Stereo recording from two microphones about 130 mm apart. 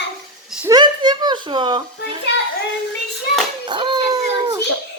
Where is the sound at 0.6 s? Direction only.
35° right (ahead or behind).